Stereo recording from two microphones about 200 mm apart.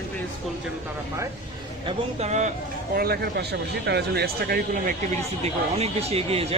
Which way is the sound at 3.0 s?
50° right (ahead or behind).